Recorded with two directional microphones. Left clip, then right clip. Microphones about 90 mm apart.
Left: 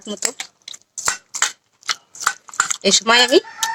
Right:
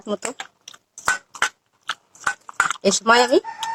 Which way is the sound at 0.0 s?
25° left (ahead or behind).